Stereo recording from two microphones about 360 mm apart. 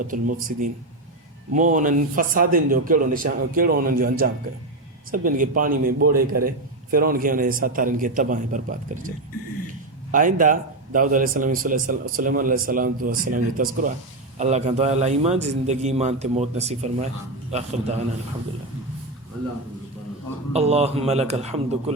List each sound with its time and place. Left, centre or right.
0.0 s speech: right
10.1 s a man's voice: right
20.5 s a man's voice: centre